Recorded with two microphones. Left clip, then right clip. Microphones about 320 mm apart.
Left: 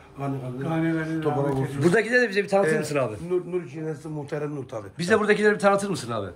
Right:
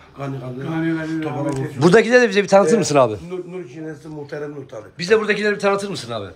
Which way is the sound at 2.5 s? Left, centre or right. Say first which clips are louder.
Right 9 dB; right.